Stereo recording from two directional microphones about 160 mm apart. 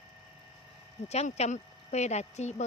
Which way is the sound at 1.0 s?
40° left (ahead or behind).